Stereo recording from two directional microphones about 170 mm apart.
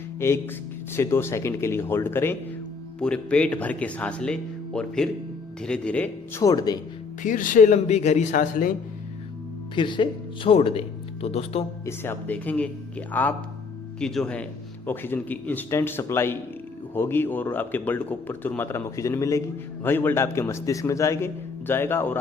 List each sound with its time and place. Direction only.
0.2 s speech: 15° left (ahead or behind)
6.4 s speech: 20° left (ahead or behind)
7.2 s speech: 50° left (ahead or behind)
9.7 s speech: 30° left (ahead or behind)
11.9 s speech: 10° left (ahead or behind)